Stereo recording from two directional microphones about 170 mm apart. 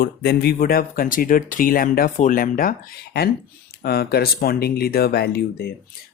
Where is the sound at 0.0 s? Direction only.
70° left (ahead or behind).